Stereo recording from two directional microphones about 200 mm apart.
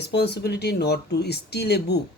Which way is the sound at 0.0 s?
55° left (ahead or behind).